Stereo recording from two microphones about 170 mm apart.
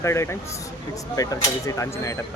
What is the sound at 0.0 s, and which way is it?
Speech, 15° left (ahead or behind).